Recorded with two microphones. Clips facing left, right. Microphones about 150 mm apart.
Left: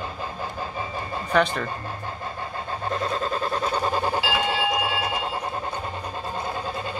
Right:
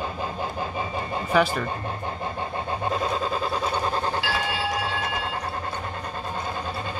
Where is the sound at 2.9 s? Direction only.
5° right (ahead or behind).